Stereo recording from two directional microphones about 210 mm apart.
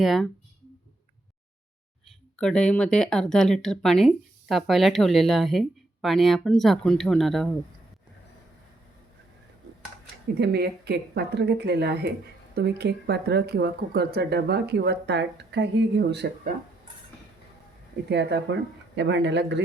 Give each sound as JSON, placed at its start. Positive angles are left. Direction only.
{"t": 0.0, "sound": "speech", "side_deg": 0}
{"t": 2.3, "sound": "speech", "side_deg": 5}
{"t": 10.3, "sound": "speech", "side_deg": -50}
{"t": 18.1, "sound": "speech", "side_deg": -55}